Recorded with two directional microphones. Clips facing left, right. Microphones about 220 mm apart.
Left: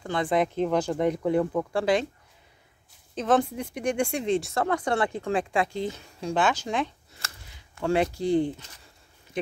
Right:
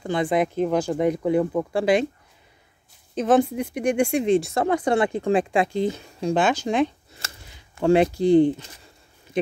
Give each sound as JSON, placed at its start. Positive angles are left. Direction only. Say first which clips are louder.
{"t": 0.0, "sound": "speech", "louder": "right 3 dB", "side_deg": -15}
{"t": 3.2, "sound": "speech", "louder": "right 5 dB", "side_deg": -10}